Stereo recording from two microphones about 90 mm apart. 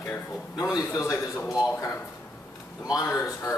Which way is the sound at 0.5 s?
40° left (ahead or behind).